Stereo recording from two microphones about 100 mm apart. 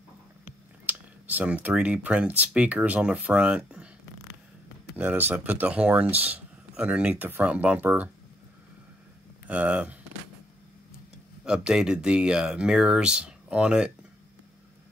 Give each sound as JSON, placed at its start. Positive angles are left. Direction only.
{"t": 0.8, "sound": "speech", "side_deg": -15}
{"t": 4.9, "sound": "speech", "side_deg": -15}
{"t": 9.5, "sound": "speech", "side_deg": -10}
{"t": 11.4, "sound": "speech", "side_deg": -10}